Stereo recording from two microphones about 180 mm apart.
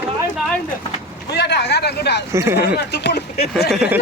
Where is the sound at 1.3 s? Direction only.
65° left (ahead or behind).